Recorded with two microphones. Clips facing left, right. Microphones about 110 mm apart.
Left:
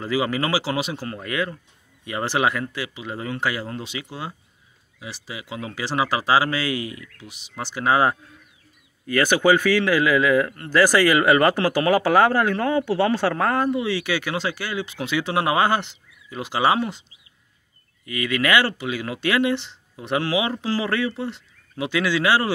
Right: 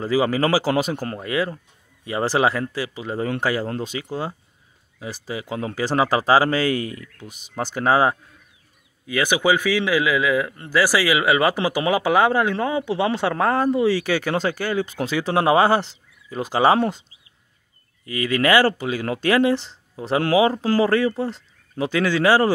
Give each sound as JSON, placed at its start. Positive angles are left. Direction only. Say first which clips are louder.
{"t": 0.0, "sound": "speech", "louder": "right 4 dB", "side_deg": -35}
{"t": 1.2, "sound": "speech", "louder": "right 2 dB", "side_deg": -30}
{"t": 9.0, "sound": "a man's voice", "louder": "left 2 dB", "side_deg": -15}
{"t": 18.0, "sound": "speech", "louder": "right 3 dB", "side_deg": -35}